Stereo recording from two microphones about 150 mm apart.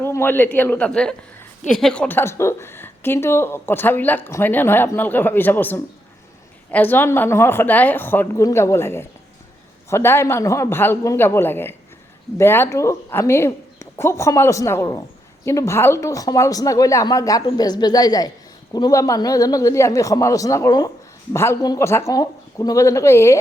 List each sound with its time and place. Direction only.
0.0 s a man's voice: 15° left (ahead or behind)